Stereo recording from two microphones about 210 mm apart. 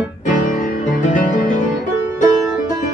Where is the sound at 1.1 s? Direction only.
40° left (ahead or behind).